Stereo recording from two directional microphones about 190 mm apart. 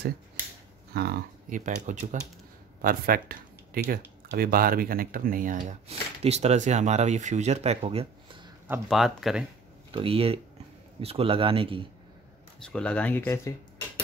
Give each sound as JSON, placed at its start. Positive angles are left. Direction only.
{"t": 0.9, "sound": "speech", "side_deg": -55}
{"t": 1.7, "sound": "speech", "side_deg": -40}
{"t": 8.8, "sound": "speech", "side_deg": 0}
{"t": 9.8, "sound": "speech", "side_deg": -30}
{"t": 12.6, "sound": "speech", "side_deg": 5}